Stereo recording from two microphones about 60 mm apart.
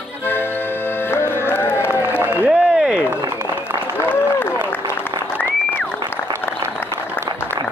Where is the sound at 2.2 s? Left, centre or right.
Centre.